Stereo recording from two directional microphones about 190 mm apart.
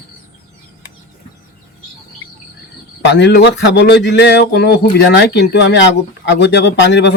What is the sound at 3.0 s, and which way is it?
A man's voice, 65° left (ahead or behind).